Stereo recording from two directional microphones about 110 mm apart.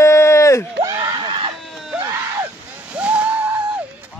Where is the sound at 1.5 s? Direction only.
Centre (ahead or behind).